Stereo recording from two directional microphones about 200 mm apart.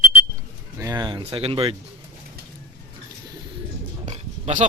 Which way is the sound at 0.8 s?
20° right (ahead or behind).